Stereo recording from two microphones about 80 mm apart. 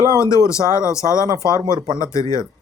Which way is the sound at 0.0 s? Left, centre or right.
Left.